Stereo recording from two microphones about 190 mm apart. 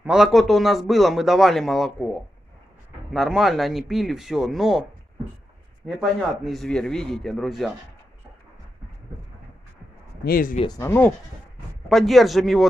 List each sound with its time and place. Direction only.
0.0 s speech: centre (ahead or behind)
3.1 s speech: centre (ahead or behind)
5.9 s speech: centre (ahead or behind)
10.2 s speech: 50° left (ahead or behind)
10.6 s speech: 15° left (ahead or behind)
11.9 s speech: centre (ahead or behind)